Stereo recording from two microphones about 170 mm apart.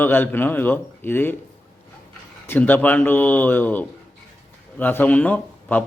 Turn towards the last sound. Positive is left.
turn(degrees=10)  # may be behind; listen again after turning